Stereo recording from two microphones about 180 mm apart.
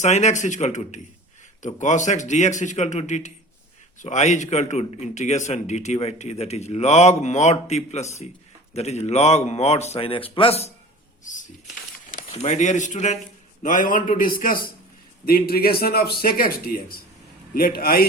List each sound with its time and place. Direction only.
0.0 s a man's voice: 40° left (ahead or behind)
12.3 s a man's voice: 40° left (ahead or behind); by 18.0 s 55° left (ahead or behind)